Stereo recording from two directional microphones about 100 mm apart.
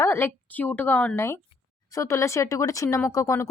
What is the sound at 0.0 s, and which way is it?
A woman's voice, 25° left (ahead or behind).